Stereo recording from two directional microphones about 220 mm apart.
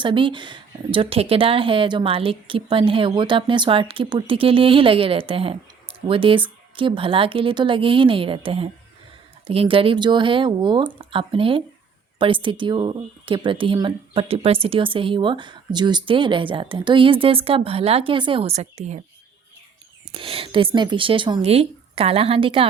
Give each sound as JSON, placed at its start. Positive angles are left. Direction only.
{"t": 0.0, "sound": "speech", "side_deg": -20}
{"t": 20.1, "sound": "speech", "side_deg": -25}